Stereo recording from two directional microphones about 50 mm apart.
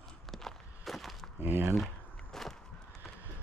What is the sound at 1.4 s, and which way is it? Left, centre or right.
Speech, right.